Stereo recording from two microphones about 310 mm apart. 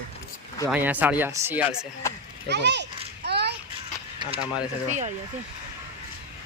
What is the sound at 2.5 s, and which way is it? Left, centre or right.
Speech, right.